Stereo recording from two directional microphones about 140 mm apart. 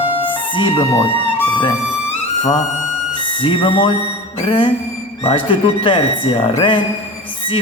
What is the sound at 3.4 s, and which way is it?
Speech, 40° left (ahead or behind).